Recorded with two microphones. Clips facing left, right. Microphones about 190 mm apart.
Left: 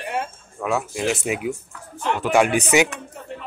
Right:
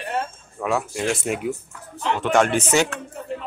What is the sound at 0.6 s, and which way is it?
Speech, centre (ahead or behind).